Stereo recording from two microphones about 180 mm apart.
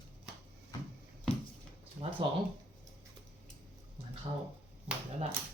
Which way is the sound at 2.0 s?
35° right (ahead or behind).